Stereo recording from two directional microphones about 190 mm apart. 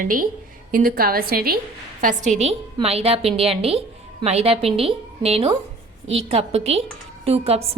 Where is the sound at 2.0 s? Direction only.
40° right (ahead or behind).